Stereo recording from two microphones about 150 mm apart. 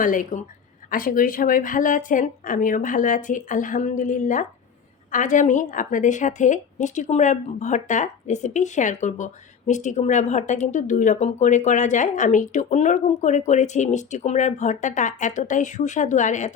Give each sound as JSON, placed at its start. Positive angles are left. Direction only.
{"t": 0.0, "sound": "a woman's voice", "side_deg": 60}